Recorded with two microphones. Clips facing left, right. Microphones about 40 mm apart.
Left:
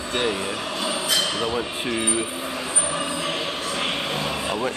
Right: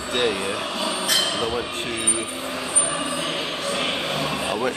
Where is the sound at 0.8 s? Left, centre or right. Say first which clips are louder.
Even; right.